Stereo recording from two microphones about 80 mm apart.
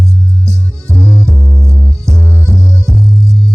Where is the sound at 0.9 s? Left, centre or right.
Right.